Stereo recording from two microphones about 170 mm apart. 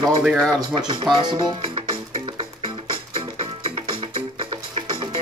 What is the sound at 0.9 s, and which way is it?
Speech, 25° right (ahead or behind).